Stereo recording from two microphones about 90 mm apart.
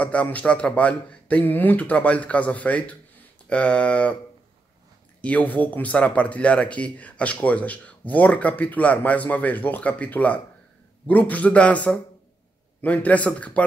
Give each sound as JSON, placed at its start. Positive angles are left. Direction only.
{"t": 0.0, "sound": "speech", "side_deg": 15}
{"t": 5.2, "sound": "speech", "side_deg": 15}